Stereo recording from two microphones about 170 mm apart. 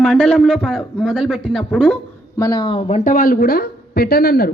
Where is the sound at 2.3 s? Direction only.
20° left (ahead or behind).